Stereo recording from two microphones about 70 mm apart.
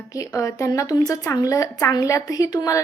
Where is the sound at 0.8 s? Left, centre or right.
Left.